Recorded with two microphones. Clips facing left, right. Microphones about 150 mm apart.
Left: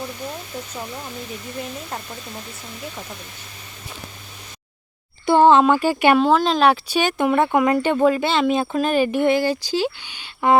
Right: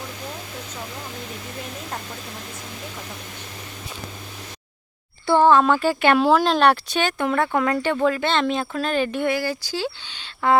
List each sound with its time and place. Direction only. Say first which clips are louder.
5.2 s speech: left 2 dB; 20° left (ahead or behind)
6.1 s speech: left 1 dB; 5° right (ahead or behind)
7.0 s speech: left 4 dB; 20° left (ahead or behind)
8.2 s speech: left 3 dB; 10° left (ahead or behind)